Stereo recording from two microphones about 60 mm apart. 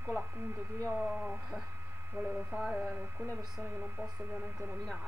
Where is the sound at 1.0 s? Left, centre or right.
Centre.